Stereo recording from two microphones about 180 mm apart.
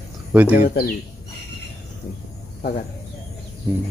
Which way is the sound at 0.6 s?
55° left (ahead or behind).